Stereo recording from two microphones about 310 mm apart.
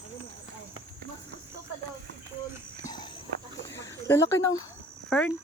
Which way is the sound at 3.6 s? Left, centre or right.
Centre.